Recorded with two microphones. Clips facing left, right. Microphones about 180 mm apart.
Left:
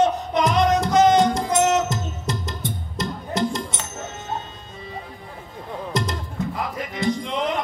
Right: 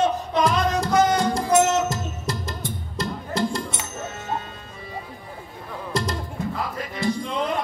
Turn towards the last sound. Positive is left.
turn(degrees=20)  # may be behind; listen again after turning